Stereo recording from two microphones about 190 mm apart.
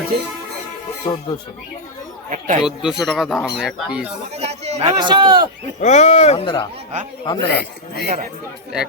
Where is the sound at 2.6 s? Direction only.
5° right (ahead or behind).